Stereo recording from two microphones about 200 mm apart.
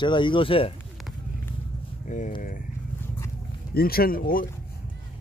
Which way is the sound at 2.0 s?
40° left (ahead or behind).